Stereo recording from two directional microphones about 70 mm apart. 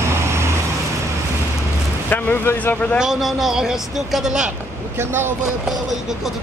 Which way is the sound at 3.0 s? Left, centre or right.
Centre.